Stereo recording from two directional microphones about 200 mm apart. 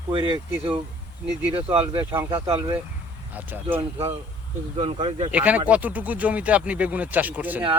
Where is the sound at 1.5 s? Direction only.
25° right (ahead or behind).